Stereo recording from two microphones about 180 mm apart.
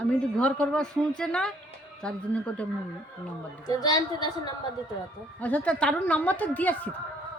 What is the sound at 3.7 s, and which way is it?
Speech, 20° left (ahead or behind).